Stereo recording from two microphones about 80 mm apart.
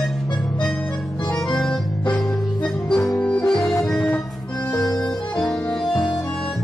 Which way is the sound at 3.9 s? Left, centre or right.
Centre.